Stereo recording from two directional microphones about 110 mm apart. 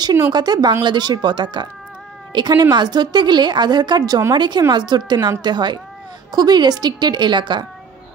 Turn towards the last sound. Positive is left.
turn(degrees=-45)  # may be behind; listen again after turning